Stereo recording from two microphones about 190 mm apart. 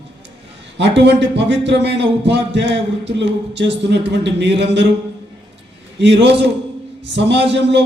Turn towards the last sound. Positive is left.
turn(degrees=-65)  # may be behind; listen again after turning